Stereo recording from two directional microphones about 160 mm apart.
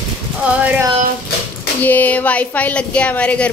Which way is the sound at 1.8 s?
10° left (ahead or behind).